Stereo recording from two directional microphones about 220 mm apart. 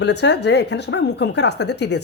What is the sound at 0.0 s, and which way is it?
Speech, 50° left (ahead or behind).